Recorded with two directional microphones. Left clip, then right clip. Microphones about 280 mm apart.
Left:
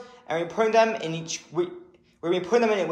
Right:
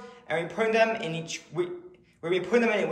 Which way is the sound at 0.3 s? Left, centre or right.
Centre.